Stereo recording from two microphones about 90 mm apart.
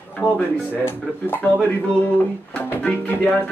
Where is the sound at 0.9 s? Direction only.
25° left (ahead or behind).